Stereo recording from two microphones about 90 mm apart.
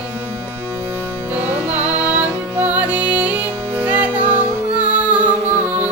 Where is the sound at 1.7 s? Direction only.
15° right (ahead or behind).